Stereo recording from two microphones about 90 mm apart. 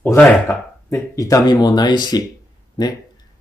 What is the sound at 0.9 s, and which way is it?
Speech, 35° left (ahead or behind).